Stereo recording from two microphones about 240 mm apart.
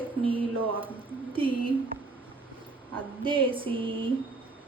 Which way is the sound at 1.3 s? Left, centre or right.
Right.